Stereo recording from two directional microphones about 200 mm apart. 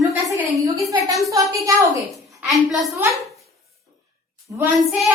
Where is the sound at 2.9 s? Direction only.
15° right (ahead or behind).